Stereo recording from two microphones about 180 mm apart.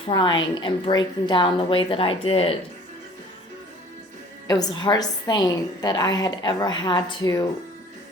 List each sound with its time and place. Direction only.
0.0 s a woman's voice: 25° left (ahead or behind)
4.4 s a woman's voice: 20° left (ahead or behind)